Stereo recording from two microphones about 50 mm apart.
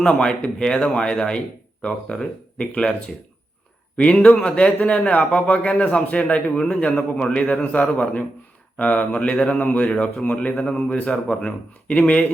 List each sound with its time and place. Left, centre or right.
0.2 s a man's voice: centre
3.9 s a man's voice: left
11.1 s a man's voice: centre